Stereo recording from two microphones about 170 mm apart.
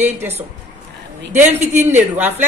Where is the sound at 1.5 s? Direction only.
40° right (ahead or behind).